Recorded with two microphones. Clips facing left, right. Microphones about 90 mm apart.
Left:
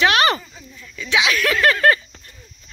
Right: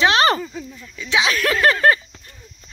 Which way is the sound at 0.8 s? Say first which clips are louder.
Even; 25° right (ahead or behind).